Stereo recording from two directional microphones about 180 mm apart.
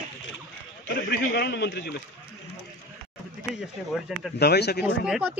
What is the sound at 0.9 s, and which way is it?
A man's voice, 60° left (ahead or behind).